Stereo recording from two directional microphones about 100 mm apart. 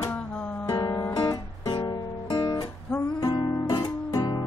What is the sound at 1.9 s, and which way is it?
Guitar, 45° left (ahead or behind).